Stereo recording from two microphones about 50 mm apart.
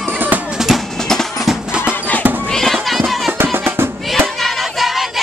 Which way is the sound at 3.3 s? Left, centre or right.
Right.